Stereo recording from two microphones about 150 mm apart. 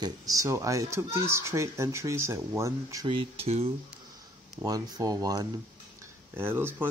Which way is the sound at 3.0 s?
35° right (ahead or behind).